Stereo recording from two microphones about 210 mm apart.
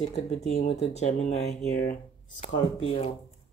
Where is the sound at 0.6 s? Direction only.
30° left (ahead or behind).